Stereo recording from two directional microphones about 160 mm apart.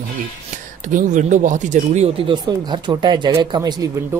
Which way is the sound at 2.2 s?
30° right (ahead or behind).